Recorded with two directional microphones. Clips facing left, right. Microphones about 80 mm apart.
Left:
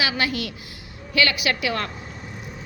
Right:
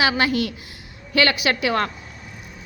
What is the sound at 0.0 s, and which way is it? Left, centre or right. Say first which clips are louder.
A woman's voice: right 5 dB; right.